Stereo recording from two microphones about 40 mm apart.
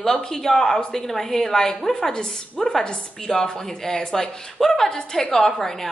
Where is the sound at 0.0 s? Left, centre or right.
Centre.